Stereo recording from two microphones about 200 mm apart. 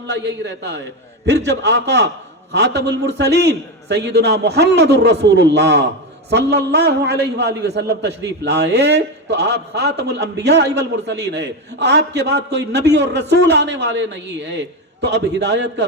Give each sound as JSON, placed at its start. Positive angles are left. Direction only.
{"t": 0.1, "sound": "a man's voice", "side_deg": -60}